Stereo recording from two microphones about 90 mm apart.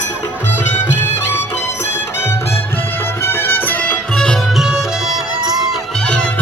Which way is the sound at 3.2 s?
25° left (ahead or behind).